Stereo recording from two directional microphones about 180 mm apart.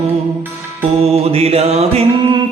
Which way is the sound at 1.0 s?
35° right (ahead or behind).